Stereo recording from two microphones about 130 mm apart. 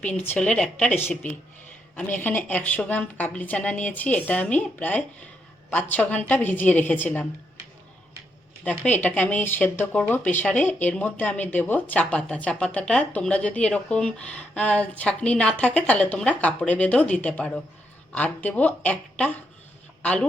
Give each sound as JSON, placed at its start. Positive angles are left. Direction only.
{"t": 0.0, "sound": "speech", "side_deg": 15}
{"t": 8.6, "sound": "speech", "side_deg": 10}